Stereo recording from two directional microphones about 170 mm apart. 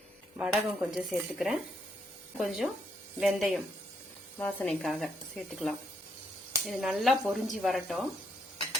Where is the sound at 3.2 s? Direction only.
Centre (ahead or behind).